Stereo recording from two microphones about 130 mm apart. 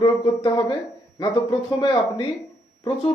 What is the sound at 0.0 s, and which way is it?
Speech, 35° left (ahead or behind).